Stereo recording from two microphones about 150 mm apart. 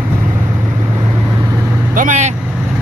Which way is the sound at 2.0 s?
55° right (ahead or behind).